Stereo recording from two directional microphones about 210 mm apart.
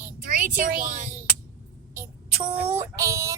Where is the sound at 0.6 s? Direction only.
40° right (ahead or behind).